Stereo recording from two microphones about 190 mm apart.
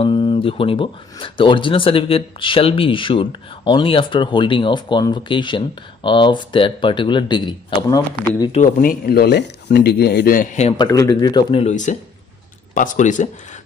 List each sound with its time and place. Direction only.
0.0 s speech: 25° left (ahead or behind)
8.5 s speech: 45° left (ahead or behind)
10.8 s speech: 20° left (ahead or behind)
11.6 s speech: 40° left (ahead or behind)